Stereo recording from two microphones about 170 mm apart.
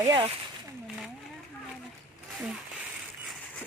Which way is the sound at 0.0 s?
25° right (ahead or behind).